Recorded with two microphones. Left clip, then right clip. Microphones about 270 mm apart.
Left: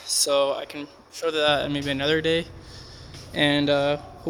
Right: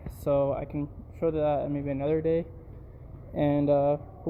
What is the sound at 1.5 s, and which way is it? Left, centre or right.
Speech, left.